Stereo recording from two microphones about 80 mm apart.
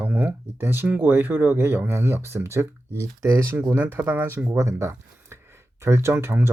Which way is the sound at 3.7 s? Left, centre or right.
Right.